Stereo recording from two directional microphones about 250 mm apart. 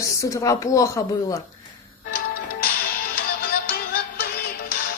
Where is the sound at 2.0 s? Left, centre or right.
Left.